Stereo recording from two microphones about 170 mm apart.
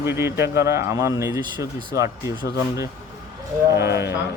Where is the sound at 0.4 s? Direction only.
80° left.